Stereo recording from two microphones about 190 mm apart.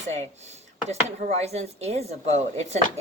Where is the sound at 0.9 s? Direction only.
35° right (ahead or behind).